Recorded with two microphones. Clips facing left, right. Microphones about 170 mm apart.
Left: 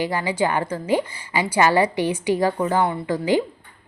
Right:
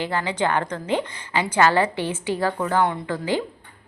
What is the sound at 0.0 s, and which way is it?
A woman's voice, 10° left (ahead or behind).